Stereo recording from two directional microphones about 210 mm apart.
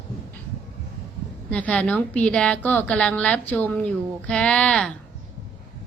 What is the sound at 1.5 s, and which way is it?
A woman's voice, 5° left (ahead or behind).